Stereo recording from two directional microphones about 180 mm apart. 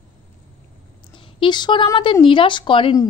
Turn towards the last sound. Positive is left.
turn(degrees=25)  # may be behind; listen again after turning